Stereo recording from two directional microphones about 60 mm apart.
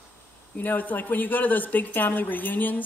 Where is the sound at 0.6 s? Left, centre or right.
Left.